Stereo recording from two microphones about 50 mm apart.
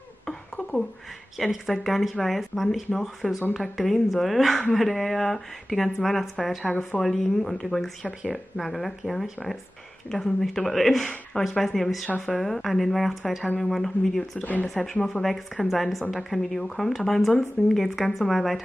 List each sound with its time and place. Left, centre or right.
1.4 s speech: centre
14.4 s speech: left
14.7 s speech: centre